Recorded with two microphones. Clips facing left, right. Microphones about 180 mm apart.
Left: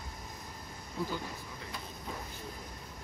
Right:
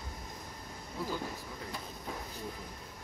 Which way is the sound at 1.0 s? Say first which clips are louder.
Left 1 dB; 5° right (ahead or behind).